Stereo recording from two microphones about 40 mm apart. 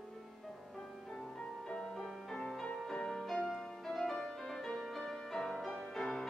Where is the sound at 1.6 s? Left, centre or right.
Centre.